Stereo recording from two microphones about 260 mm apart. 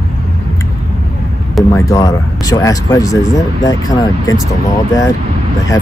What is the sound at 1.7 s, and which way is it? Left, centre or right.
Speech, centre.